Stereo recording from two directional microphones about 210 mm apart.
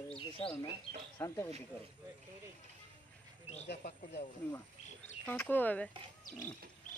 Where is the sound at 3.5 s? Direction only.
30° left (ahead or behind).